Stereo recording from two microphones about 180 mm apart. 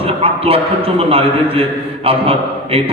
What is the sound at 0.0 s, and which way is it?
A man's voice, 30° right (ahead or behind).